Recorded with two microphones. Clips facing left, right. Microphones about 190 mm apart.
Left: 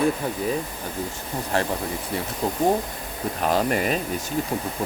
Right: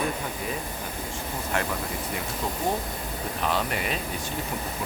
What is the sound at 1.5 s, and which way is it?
Speech, 35° left (ahead or behind).